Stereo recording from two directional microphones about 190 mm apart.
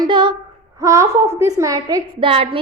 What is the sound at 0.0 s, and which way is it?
Female singing, 25° right (ahead or behind).